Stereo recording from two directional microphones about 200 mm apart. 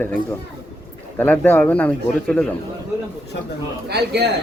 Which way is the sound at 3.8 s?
55° right (ahead or behind).